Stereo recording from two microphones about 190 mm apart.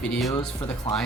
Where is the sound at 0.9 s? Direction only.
30° left (ahead or behind).